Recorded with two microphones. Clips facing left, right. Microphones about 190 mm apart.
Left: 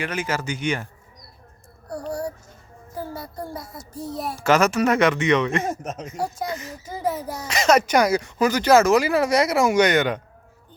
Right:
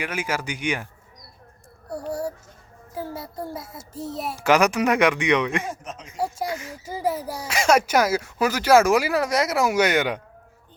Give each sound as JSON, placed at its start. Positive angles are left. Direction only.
{"t": 0.0, "sound": "speech", "side_deg": -10}
{"t": 1.9, "sound": "a sound", "side_deg": -5}
{"t": 2.9, "sound": "a child's voice", "side_deg": -5}
{"t": 3.9, "sound": "a child's voice", "side_deg": -25}
{"t": 4.4, "sound": "speech", "side_deg": -15}
{"t": 5.6, "sound": "speech", "side_deg": 45}
{"t": 6.1, "sound": "speech", "side_deg": -5}